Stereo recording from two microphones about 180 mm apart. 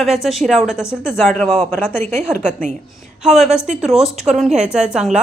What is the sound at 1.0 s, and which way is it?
Speech, 10° left (ahead or behind).